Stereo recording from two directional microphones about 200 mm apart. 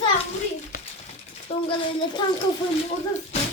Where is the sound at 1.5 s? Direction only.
30° left (ahead or behind).